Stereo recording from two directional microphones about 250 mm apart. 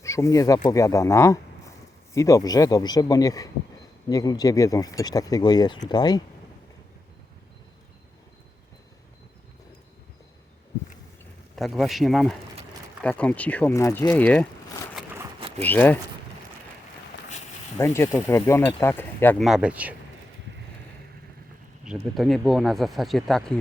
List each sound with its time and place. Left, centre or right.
0.0 s speech: centre
11.5 s speech: centre
15.1 s a sound: centre
15.6 s speech: centre
17.7 s speech: centre
21.8 s speech: centre